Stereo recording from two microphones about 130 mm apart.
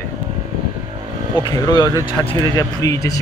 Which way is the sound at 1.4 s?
35° left (ahead or behind).